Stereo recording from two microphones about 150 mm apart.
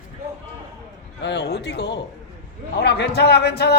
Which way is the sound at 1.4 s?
90° left.